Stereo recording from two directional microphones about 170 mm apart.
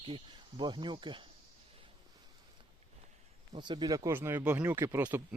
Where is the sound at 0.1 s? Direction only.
30° right (ahead or behind).